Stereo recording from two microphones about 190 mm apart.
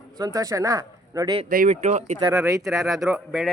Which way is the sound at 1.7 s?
35° right (ahead or behind).